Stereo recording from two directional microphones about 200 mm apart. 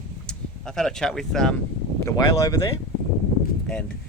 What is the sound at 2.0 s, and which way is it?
Speech, 15° left (ahead or behind).